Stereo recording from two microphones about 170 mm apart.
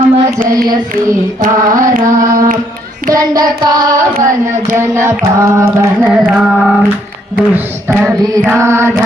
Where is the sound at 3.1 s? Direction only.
20° right (ahead or behind).